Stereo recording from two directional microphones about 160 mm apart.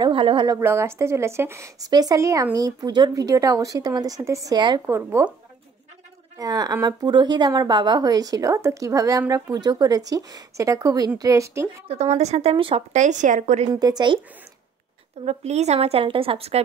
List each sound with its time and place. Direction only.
0.0 s speech: 30° right (ahead or behind)
0.6 s speech: 15° right (ahead or behind)
4.8 s speech: 15° right (ahead or behind)
6.3 s speech: 25° right (ahead or behind)
11.9 s speech: 40° right (ahead or behind)
12.9 s speech: 50° right (ahead or behind)
13.7 s speech: 25° right (ahead or behind)
15.2 s speech: 45° right (ahead or behind)